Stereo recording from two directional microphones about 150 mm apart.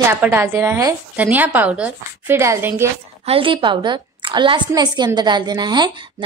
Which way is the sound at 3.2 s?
35° right (ahead or behind).